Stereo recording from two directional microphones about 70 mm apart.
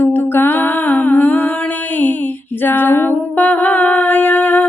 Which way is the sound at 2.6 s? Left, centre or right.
Left.